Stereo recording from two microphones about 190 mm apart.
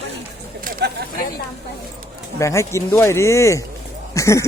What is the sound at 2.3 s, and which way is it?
Speech, 15° left (ahead or behind).